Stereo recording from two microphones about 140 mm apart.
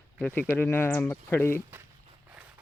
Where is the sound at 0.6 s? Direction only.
15° left (ahead or behind).